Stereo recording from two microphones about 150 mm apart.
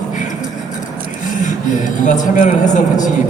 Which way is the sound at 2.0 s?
55° left (ahead or behind).